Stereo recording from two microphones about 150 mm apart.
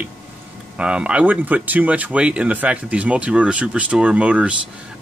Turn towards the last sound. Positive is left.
turn(degrees=-5)  # may be behind; listen again after turning